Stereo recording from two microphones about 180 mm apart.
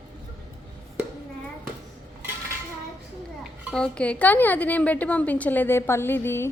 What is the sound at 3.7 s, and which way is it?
A woman's voice, 5° left (ahead or behind).